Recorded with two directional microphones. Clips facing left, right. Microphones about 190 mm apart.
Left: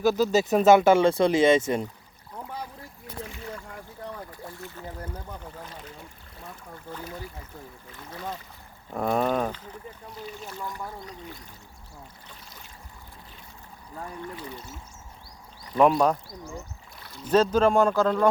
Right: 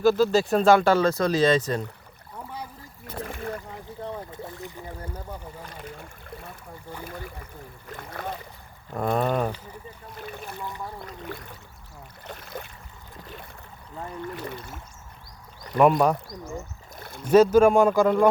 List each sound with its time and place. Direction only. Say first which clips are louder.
0.0 s speech: right 2 dB; 15° left (ahead or behind)
3.2 s rowboat: right 5 dB; 55° right (ahead or behind)
4.3 s boat: right 3 dB; 20° right (ahead or behind)
5.6 s a sound: right 3 dB; 55° right (ahead or behind)
7.9 s speech: right 7 dB; 60° right (ahead or behind)
8.9 s speech: even; centre (ahead or behind)
10.2 s boat: right 2 dB; 60° right (ahead or behind)
11.0 s a sound: right 4 dB; 60° right (ahead or behind)
14.3 s speech: right 3 dB; 65° right (ahead or behind)
15.8 s speech: right 1 dB; 5° right (ahead or behind)
16.9 s a sound: right 4 dB; 50° right (ahead or behind)
17.3 s speech: right 4 dB; 10° right (ahead or behind)